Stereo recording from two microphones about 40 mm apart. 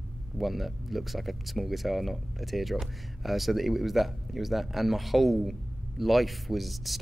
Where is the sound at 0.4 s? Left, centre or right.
Centre.